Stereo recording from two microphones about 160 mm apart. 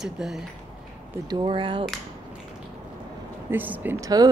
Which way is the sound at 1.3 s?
30° right (ahead or behind).